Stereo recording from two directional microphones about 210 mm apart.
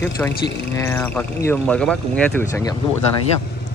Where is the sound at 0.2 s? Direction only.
5° left (ahead or behind).